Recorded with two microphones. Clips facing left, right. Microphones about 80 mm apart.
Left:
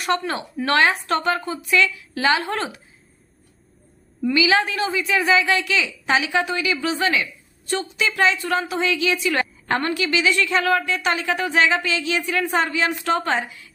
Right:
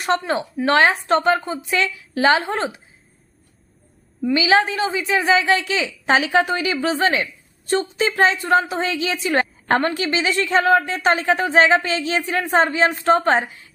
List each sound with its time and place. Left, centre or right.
0.1 s a woman's voice: right
4.4 s a woman's voice: right